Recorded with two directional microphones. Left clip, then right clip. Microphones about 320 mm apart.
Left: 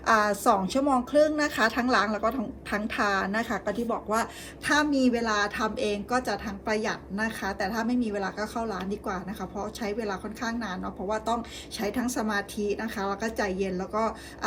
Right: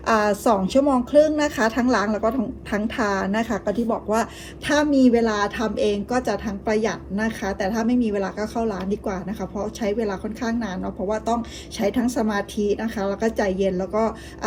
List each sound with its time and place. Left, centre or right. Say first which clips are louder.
0.1 s a woman's voice: right 3 dB; centre